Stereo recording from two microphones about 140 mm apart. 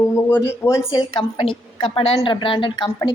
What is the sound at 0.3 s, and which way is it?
Speech, 20° left (ahead or behind).